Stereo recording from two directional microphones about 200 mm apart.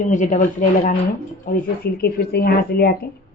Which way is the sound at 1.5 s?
50° left (ahead or behind).